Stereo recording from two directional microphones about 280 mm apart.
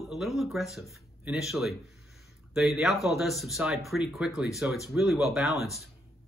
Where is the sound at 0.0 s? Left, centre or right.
Centre.